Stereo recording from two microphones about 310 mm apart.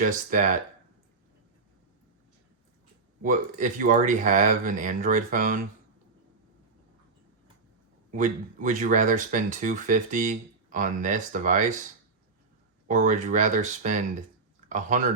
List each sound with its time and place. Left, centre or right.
0.0 s speech: right
3.2 s speech: right
8.1 s speech: right
12.9 s speech: right